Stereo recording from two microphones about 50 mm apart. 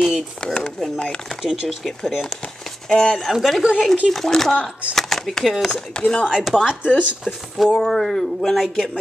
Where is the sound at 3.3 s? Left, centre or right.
Centre.